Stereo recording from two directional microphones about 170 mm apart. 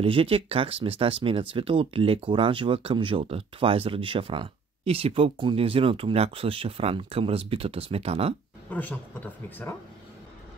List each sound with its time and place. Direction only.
0.0 s speech: 30° right (ahead or behind)
8.6 s a woman's voice: 10° left (ahead or behind)